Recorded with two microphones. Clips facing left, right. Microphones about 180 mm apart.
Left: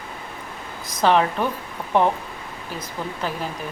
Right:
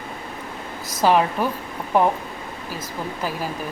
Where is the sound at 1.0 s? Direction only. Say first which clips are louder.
Even; 5° right (ahead or behind).